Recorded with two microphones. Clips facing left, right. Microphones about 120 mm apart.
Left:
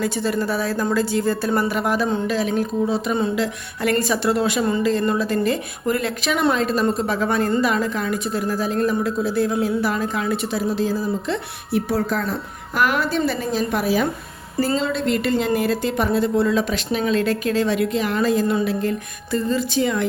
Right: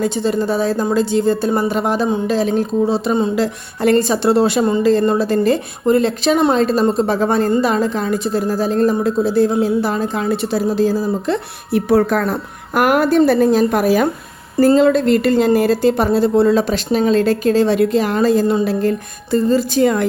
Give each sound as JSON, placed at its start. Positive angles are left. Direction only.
{"t": 0.0, "sound": "a woman's voice", "side_deg": -25}
{"t": 11.7, "sound": "a woman's voice", "side_deg": -60}